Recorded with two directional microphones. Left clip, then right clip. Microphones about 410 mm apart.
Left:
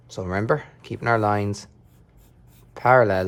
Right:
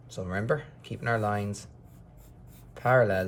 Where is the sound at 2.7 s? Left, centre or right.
Centre.